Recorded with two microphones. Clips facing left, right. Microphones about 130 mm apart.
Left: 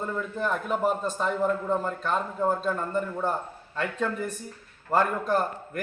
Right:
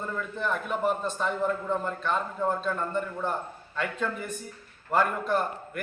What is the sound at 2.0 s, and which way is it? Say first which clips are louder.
Speech: left 2 dB; 5° left (ahead or behind).